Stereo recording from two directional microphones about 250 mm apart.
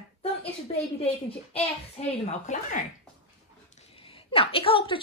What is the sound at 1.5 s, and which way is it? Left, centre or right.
A woman's voice, left.